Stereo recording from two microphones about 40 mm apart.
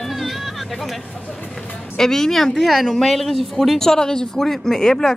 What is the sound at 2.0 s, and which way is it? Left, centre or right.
Speech, centre.